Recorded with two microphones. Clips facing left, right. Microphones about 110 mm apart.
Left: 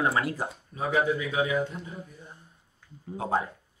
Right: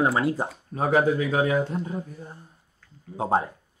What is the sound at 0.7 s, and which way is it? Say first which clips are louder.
Speech: right 5 dB; 45° right (ahead or behind).